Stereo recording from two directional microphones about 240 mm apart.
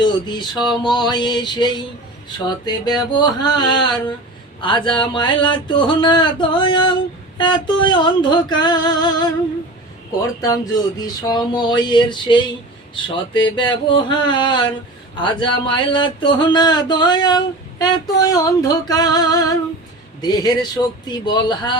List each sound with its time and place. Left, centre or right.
0.0 s speech: centre
10.4 s speech: centre